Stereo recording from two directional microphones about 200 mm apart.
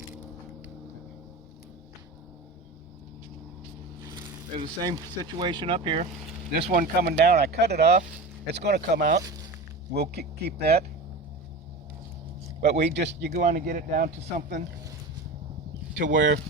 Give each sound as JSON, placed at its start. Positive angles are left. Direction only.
{"t": 4.1, "sound": "speech", "side_deg": -25}
{"t": 6.6, "sound": "speech", "side_deg": -45}
{"t": 12.8, "sound": "speech", "side_deg": -60}
{"t": 13.3, "sound": "speech", "side_deg": -40}
{"t": 16.0, "sound": "speech", "side_deg": -65}